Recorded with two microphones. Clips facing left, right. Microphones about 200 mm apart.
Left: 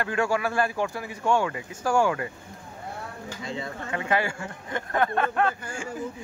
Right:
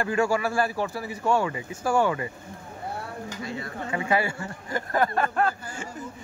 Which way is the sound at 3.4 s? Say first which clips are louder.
Left 3 dB; 20° left (ahead or behind).